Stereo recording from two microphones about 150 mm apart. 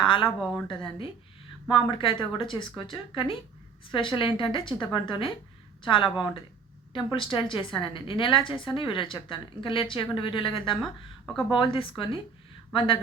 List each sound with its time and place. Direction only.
0.0 s a woman's voice: 35° left (ahead or behind)
0.3 s a woman's voice: centre (ahead or behind)
1.7 s speech: 35° left (ahead or behind)